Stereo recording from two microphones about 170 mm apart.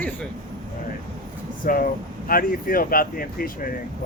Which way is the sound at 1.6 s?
55° left (ahead or behind).